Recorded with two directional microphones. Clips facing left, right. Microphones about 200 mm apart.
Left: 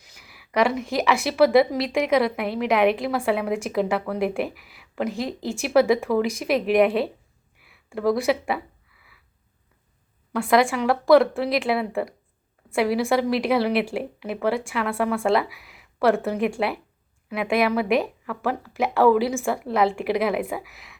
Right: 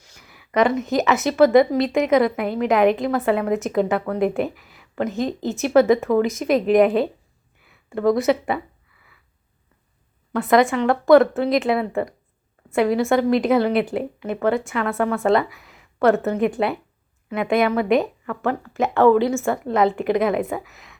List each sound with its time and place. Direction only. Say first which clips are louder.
0.2 s a sound: right 3 dB; 5° left (ahead or behind)
1.3 s a woman's voice: right 3 dB; 5° left (ahead or behind)
10.4 s a woman's voice: right 3 dB; 5° left (ahead or behind)